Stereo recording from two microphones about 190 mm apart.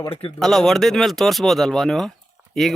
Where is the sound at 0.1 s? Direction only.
30° left (ahead or behind).